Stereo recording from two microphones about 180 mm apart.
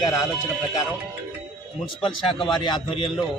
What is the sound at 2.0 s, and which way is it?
A man's voice, 30° left (ahead or behind).